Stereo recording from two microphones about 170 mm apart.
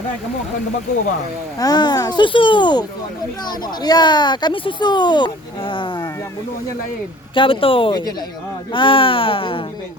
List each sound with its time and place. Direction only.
1.5 s speech: 25° left (ahead or behind)
3.8 s speech: 25° left (ahead or behind)
7.3 s speech: 30° left (ahead or behind)